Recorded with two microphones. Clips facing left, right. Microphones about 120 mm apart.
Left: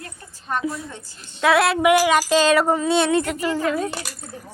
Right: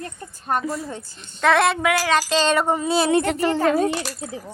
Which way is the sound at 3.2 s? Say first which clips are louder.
Right 3 dB; 65° right (ahead or behind).